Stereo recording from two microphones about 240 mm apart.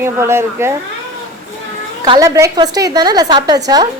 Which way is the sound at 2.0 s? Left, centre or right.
Centre.